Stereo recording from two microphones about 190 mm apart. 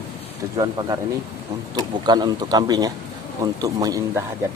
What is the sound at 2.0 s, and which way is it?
Speech, 20° right (ahead or behind).